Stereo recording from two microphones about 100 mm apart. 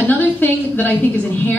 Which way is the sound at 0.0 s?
20° left (ahead or behind).